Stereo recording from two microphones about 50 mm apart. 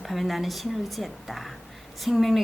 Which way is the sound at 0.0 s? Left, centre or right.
Centre.